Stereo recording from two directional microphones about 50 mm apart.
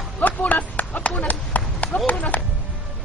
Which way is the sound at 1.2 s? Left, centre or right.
Left.